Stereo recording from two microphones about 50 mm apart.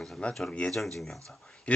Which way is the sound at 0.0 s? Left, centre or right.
Centre.